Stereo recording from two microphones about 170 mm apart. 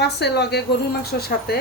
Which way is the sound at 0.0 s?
75° left (ahead or behind).